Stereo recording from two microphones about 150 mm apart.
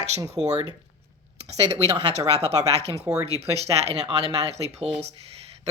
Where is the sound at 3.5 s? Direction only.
45° right (ahead or behind).